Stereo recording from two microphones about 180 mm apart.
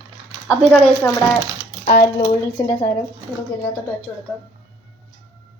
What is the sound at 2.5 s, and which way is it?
Speech, 30° left (ahead or behind).